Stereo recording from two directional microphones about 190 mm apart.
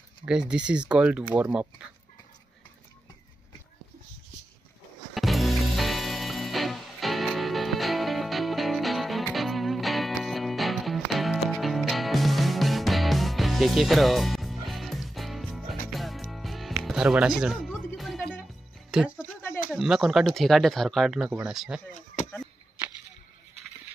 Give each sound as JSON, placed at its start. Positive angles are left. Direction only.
{"t": 0.2, "sound": "speech", "side_deg": -5}
{"t": 5.1, "sound": "music", "side_deg": 0}
{"t": 16.8, "sound": "speech", "side_deg": -5}
{"t": 17.8, "sound": "music", "side_deg": 0}
{"t": 18.9, "sound": "speech", "side_deg": -5}
{"t": 21.9, "sound": "a sound", "side_deg": 40}